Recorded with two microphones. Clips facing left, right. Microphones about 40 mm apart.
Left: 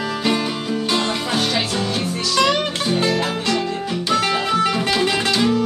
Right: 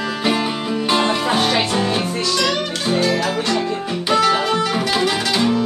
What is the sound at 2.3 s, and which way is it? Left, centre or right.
Music, centre.